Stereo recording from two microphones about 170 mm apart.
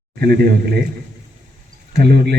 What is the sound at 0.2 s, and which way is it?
Speech, 65° right (ahead or behind).